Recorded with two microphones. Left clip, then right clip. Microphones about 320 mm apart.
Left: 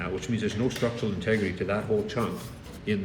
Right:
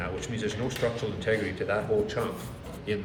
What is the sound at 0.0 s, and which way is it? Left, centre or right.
A man's voice, centre.